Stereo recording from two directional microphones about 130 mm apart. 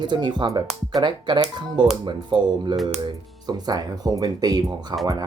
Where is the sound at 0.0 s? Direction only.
35° right (ahead or behind).